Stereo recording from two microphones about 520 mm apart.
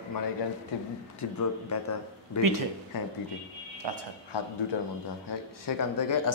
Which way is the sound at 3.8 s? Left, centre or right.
Right.